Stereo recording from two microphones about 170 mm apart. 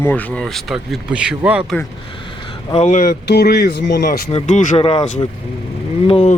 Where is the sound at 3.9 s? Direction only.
55° left (ahead or behind).